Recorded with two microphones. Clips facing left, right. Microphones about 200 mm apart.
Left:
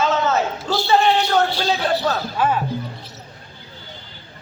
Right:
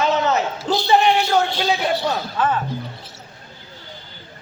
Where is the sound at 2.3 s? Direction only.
10° left (ahead or behind).